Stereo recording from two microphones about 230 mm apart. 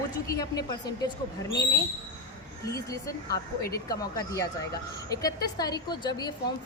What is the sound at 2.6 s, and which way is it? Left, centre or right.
A woman's voice, centre.